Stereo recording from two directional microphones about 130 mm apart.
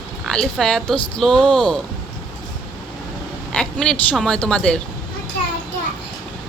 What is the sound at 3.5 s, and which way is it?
A woman's voice, 5° left (ahead or behind).